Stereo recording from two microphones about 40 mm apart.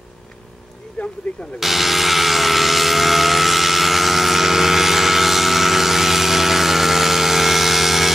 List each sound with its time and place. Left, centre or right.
1.0 s speech: left
1.6 s vehicle: centre